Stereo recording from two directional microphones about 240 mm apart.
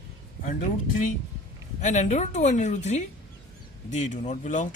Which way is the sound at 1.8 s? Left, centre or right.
Left.